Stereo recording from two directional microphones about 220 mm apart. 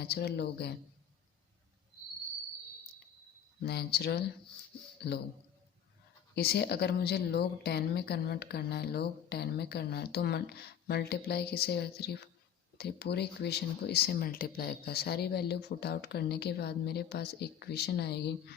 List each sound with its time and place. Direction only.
0.0 s speech: 50° left (ahead or behind)
3.6 s speech: 45° left (ahead or behind)
6.3 s speech: 45° left (ahead or behind)